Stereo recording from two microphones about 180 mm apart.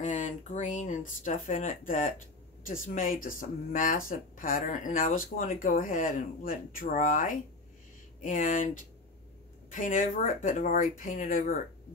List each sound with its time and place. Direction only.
0.0 s speech: 45° left (ahead or behind)